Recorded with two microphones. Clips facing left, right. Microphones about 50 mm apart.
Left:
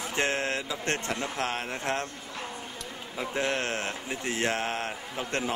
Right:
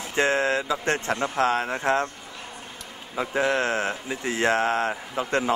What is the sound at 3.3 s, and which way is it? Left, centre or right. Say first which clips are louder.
Speech: right 6 dB; right.